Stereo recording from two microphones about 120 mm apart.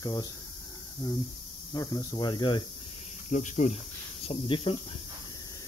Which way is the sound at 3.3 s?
80° left.